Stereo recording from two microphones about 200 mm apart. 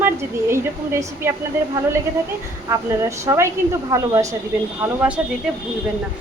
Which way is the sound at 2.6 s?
15° right (ahead or behind).